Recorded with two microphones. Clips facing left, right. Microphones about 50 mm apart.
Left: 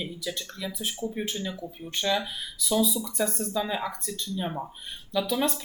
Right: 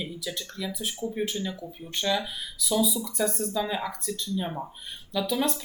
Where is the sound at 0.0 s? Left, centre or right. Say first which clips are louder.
Left 1 dB; centre.